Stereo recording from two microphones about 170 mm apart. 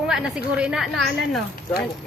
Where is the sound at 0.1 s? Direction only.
5° right (ahead or behind).